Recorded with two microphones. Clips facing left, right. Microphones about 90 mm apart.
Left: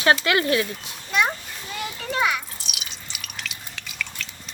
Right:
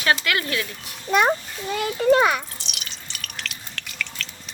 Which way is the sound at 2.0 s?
40° right (ahead or behind).